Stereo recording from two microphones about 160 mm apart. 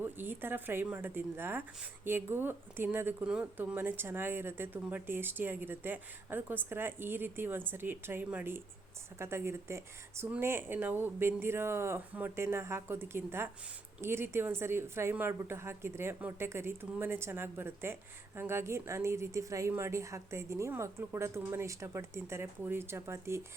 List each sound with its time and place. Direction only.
0.0 s speech: 15° right (ahead or behind)